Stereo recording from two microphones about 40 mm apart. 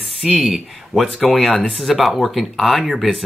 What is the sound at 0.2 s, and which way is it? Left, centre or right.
Speech, centre.